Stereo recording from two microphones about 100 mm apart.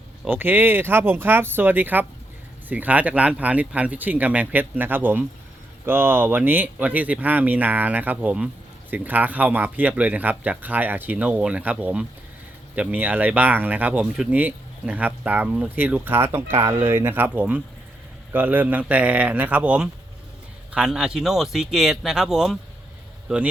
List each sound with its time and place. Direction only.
0.3 s speech: 20° right (ahead or behind)